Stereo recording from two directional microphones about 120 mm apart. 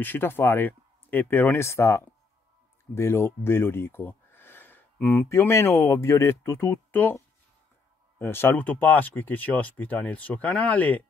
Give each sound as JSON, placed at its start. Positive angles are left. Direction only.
{"t": 0.0, "sound": "speech", "side_deg": 15}